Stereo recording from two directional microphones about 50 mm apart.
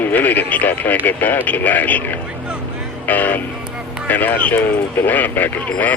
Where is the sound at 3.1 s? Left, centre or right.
Left.